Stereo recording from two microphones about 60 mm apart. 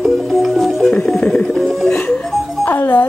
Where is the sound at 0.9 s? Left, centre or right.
Centre.